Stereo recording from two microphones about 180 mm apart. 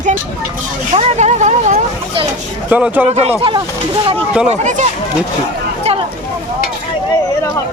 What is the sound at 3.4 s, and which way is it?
Speech, 25° right (ahead or behind).